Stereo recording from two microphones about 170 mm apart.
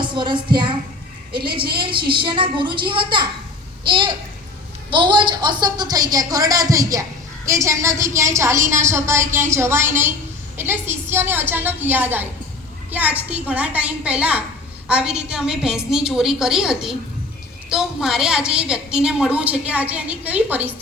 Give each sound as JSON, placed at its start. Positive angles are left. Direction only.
{"t": 0.0, "sound": "speech", "side_deg": -30}
{"t": 1.8, "sound": "a woman's voice", "side_deg": -30}